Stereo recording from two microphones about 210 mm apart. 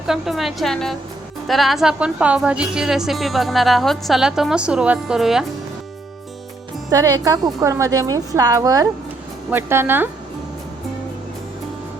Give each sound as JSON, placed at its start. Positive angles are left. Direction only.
{"t": 0.1, "sound": "a woman's voice", "side_deg": 0}
{"t": 6.9, "sound": "a woman's voice", "side_deg": -15}